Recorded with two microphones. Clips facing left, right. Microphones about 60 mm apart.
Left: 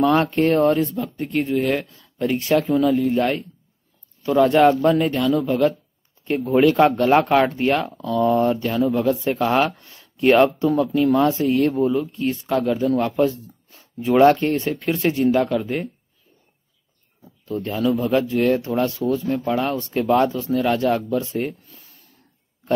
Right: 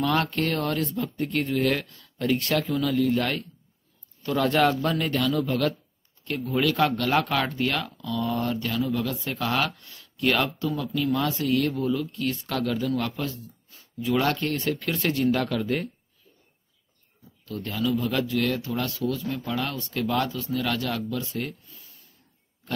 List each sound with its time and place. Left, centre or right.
0.3 s speech: left
0.8 s a man's voice: centre
2.7 s a man's voice: left
6.2 s a man's voice: left
17.2 s speech: left